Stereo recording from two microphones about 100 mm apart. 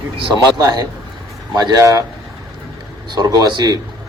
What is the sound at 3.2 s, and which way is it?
Speech, 40° right (ahead or behind).